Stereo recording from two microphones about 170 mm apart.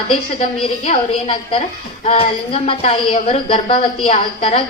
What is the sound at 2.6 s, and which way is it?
A woman's voice, 30° left (ahead or behind).